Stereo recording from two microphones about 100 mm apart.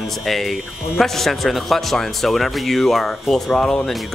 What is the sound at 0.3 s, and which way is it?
Speech, centre (ahead or behind).